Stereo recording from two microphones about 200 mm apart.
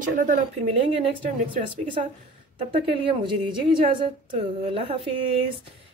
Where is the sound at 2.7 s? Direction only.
30° right (ahead or behind).